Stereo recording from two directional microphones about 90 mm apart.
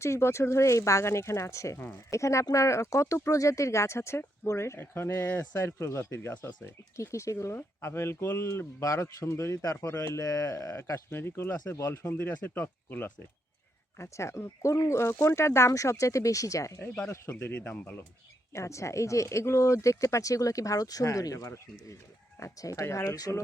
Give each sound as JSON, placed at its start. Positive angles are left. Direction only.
{"t": 0.0, "sound": "speech", "side_deg": 30}
{"t": 5.5, "sound": "speech", "side_deg": 35}
{"t": 17.5, "sound": "speech", "side_deg": 15}
{"t": 18.5, "sound": "speech", "side_deg": 35}